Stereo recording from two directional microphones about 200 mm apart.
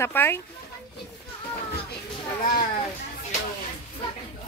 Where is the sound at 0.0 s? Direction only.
10° left (ahead or behind).